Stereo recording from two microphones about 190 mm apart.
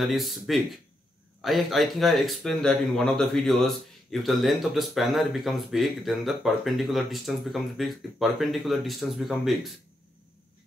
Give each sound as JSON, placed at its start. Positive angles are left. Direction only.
{"t": 0.0, "sound": "speech", "side_deg": 0}